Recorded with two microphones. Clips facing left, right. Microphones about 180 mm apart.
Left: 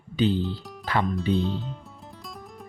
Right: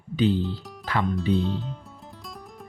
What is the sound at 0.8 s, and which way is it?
Music, 25° left (ahead or behind).